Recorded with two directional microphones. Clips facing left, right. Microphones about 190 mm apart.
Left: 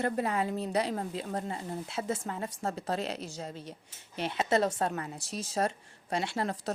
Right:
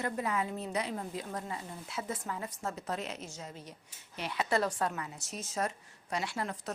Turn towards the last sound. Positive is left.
turn(degrees=30)  # may be behind; listen again after turning